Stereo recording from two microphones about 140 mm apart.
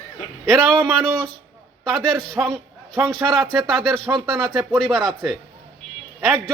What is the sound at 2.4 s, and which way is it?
Speech, 10° right (ahead or behind).